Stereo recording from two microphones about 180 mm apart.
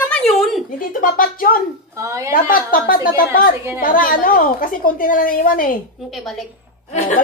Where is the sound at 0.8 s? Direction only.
50° left (ahead or behind).